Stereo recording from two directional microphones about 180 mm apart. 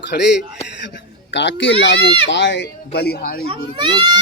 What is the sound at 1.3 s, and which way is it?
Speech, 80° left.